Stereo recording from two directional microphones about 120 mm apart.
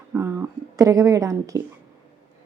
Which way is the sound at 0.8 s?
30° right (ahead or behind).